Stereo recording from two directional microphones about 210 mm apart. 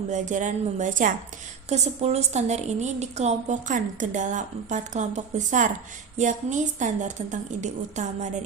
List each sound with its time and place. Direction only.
0.1 s a woman's voice: 35° right (ahead or behind)